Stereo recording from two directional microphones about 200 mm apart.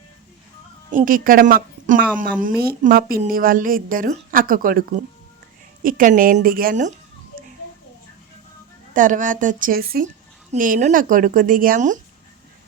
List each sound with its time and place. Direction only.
0.9 s a woman's voice: 40° right (ahead or behind)
8.9 s speech: 40° right (ahead or behind)